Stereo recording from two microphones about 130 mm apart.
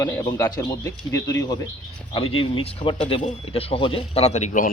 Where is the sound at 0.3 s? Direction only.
30° left (ahead or behind).